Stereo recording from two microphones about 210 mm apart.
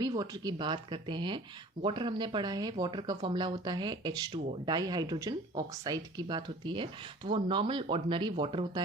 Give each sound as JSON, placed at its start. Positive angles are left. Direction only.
{"t": 0.0, "sound": "speech", "side_deg": -20}